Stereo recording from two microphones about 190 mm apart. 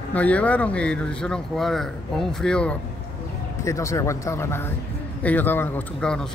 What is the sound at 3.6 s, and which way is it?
Speech, 15° left (ahead or behind).